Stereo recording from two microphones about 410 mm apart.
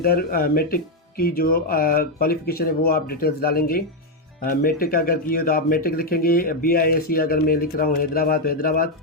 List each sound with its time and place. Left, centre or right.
0.0 s speech: left